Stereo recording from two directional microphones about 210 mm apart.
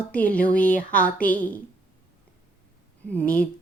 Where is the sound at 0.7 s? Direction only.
40° left (ahead or behind).